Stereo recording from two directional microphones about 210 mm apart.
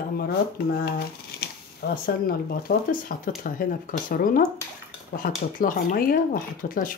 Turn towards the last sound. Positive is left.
turn(degrees=40)  # may be behind; listen again after turning